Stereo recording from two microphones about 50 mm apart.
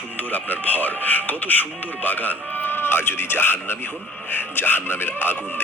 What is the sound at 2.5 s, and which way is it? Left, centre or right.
Music, left.